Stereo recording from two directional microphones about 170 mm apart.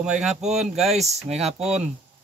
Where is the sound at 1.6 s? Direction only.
5° right (ahead or behind).